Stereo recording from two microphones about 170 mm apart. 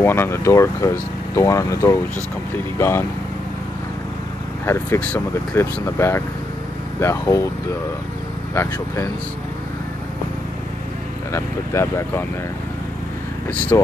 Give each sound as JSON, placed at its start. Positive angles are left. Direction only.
{"t": 0.0, "sound": "speech", "side_deg": 15}
{"t": 4.6, "sound": "speech", "side_deg": 15}
{"t": 8.5, "sound": "speech", "side_deg": 15}
{"t": 11.3, "sound": "speech", "side_deg": 15}